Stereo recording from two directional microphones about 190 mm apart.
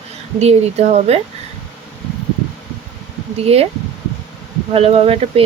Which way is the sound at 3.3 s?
30° right (ahead or behind).